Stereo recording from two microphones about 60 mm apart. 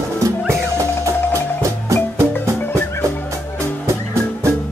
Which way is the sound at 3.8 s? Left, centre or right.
Right.